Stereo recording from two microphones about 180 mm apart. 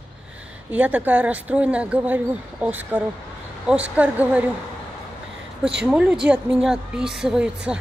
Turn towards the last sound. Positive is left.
turn(degrees=-5)  # may be behind; listen again after turning